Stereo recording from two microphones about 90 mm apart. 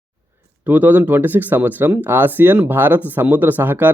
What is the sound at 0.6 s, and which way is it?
Speech, 20° right (ahead or behind).